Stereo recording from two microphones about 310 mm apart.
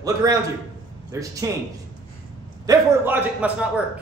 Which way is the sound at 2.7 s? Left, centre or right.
Centre.